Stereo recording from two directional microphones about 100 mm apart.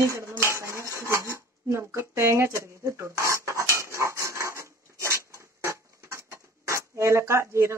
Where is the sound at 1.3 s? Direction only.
30° right (ahead or behind).